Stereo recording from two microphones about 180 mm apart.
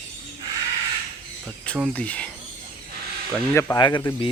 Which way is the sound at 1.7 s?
5° left (ahead or behind).